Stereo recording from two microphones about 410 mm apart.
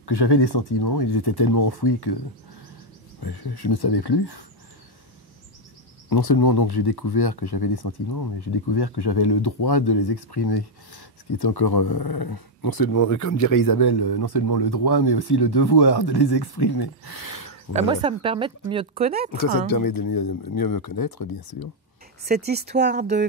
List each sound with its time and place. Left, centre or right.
0.0 s speech: left
3.2 s speech: left
6.0 s speech: left
17.7 s speech: centre
19.3 s speech: left
22.5 s speech: right